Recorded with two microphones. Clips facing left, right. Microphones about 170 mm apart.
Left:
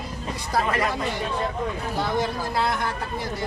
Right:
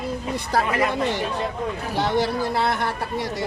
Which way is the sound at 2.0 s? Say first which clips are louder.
Right 4 dB; 75° right (ahead or behind).